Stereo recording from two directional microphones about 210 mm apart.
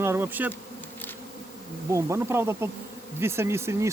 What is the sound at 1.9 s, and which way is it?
Speech, 15° right (ahead or behind).